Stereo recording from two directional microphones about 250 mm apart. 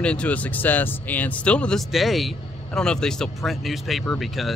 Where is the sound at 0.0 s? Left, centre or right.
Centre.